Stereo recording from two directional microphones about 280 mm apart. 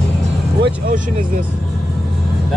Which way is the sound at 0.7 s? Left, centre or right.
Right.